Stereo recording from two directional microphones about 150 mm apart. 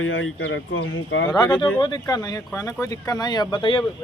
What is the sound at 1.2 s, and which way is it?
Speech, 30° left (ahead or behind).